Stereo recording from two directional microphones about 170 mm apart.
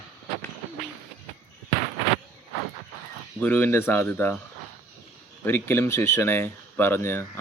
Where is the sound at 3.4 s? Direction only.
10° left (ahead or behind).